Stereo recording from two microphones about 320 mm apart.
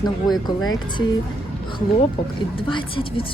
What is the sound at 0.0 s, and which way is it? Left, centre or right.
Speech, centre.